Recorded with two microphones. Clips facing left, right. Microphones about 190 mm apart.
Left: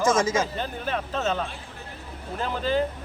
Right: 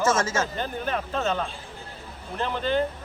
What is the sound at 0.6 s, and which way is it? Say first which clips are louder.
Speech: right 1 dB; centre (ahead or behind).